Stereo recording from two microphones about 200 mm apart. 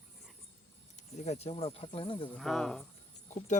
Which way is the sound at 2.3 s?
Centre (ahead or behind).